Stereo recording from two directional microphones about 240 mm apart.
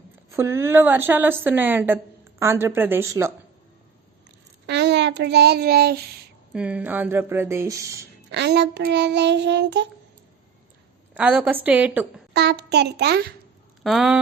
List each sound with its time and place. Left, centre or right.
0.3 s a woman's voice: centre
4.6 s a child's voice: right
6.5 s a woman's voice: centre
8.3 s child singing: right
11.1 s a woman's voice: centre
12.3 s child singing: right
13.8 s a woman's voice: centre